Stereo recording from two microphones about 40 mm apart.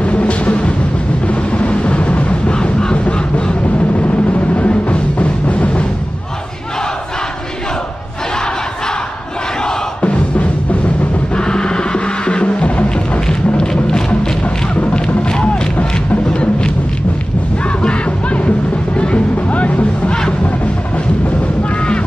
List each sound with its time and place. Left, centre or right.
0.0 s music: left
4.6 s music: left
10.0 s music: left
11.3 s music: left
13.3 s music: centre
17.8 s music: left